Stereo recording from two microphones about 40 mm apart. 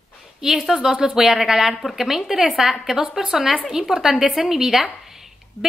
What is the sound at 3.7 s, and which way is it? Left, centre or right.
A woman's voice, centre.